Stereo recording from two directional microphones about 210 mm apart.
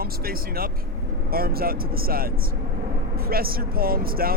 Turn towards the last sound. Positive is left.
turn(degrees=-45)  # may be behind; listen again after turning